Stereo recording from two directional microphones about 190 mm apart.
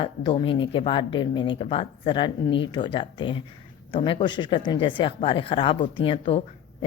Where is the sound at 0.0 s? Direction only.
25° left (ahead or behind).